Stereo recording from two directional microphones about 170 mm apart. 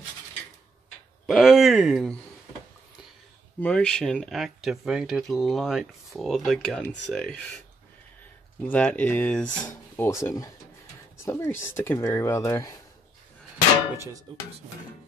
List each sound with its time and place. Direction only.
1.2 s speech: centre (ahead or behind)
3.6 s speech: 5° left (ahead or behind)
8.6 s speech: 5° left (ahead or behind)